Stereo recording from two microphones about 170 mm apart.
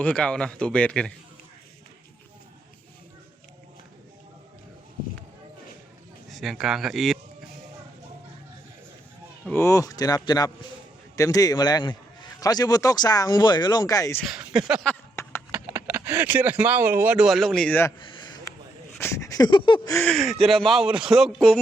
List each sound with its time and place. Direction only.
0.0 s speech: 5° left (ahead or behind)
6.3 s speech: centre (ahead or behind)
9.5 s a man's voice: 15° left (ahead or behind)
14.3 s speech: 5° right (ahead or behind)
15.1 s a sound: 15° left (ahead or behind)
15.5 s speech: 10° right (ahead or behind); by 17.9 s 10° left (ahead or behind)
18.0 s a sound: 30° left (ahead or behind)
18.9 s a sound: 15° left (ahead or behind)
20.1 s speech: centre (ahead or behind)